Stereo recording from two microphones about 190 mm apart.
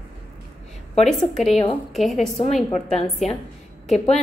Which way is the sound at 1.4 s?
35° left (ahead or behind).